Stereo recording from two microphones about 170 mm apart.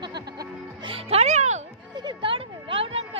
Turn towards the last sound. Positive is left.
turn(degrees=-35)  # may be behind; listen again after turning